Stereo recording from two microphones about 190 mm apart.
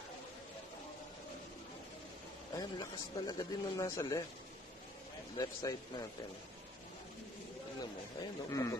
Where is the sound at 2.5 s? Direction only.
20° left (ahead or behind).